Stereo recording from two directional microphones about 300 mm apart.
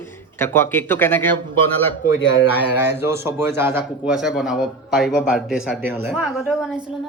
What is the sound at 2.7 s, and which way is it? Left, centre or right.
A man's voice, centre.